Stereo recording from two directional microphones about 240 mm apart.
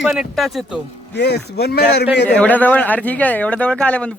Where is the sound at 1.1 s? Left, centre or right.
Left.